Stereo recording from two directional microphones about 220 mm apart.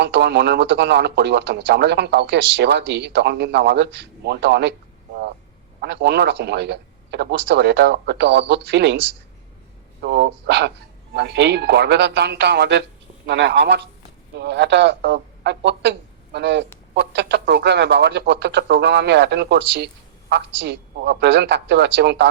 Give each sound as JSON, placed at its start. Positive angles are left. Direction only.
{"t": 0.0, "sound": "speech", "side_deg": -50}
{"t": 5.8, "sound": "speech", "side_deg": -50}
{"t": 10.0, "sound": "speech", "side_deg": -50}